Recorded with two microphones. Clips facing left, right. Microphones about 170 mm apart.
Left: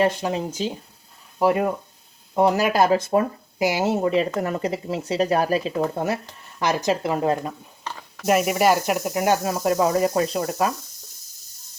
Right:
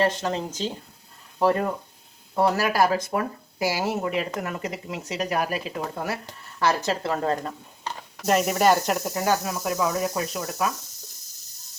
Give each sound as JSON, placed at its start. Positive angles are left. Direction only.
{"t": 0.0, "sound": "speech", "side_deg": 10}
{"t": 6.6, "sound": "speech", "side_deg": 15}
{"t": 9.1, "sound": "speech", "side_deg": 20}
{"t": 9.4, "sound": "speech", "side_deg": 30}